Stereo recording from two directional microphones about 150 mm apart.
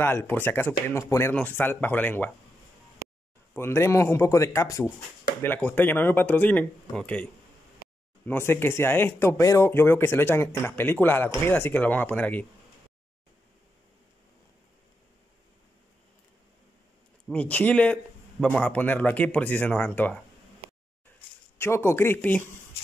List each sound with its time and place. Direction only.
0.0 s speech: 15° left (ahead or behind)
3.5 s a man's voice: 15° left (ahead or behind)
8.3 s speech: 15° left (ahead or behind)
17.3 s speech: 10° left (ahead or behind)
21.5 s speech: 15° left (ahead or behind)